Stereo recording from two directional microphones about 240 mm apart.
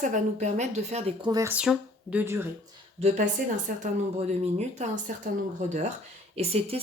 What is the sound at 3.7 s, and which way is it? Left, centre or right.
A woman's voice, right.